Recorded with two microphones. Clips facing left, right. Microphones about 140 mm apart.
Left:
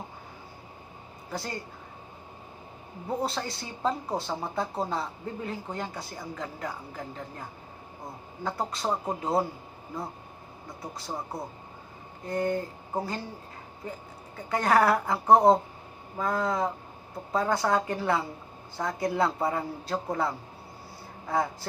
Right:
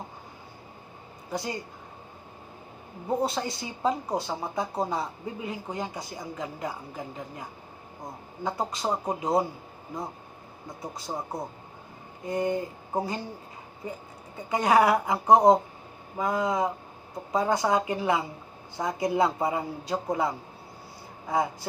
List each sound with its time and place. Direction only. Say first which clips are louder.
1.3 s speech: right 3 dB; 15° right (ahead or behind)
3.2 s speech: right 2 dB; 20° right (ahead or behind)
10.7 s speech: right 2 dB; 20° right (ahead or behind)
14.3 s speech: right 2 dB; 15° right (ahead or behind)